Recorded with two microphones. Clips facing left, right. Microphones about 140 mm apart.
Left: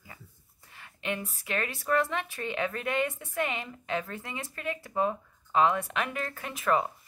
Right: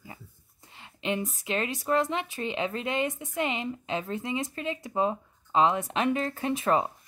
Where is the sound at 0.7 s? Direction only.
20° right (ahead or behind).